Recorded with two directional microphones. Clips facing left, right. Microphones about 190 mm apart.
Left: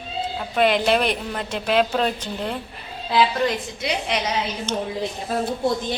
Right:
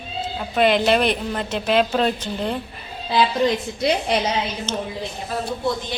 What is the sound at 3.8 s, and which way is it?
Speech, 40° right (ahead or behind).